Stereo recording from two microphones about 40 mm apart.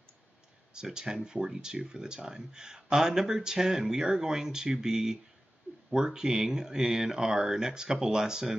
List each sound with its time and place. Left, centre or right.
0.7 s speech: centre